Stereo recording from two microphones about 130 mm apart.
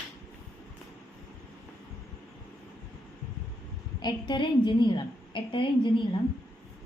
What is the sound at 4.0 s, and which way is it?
A woman's voice, 35° left (ahead or behind).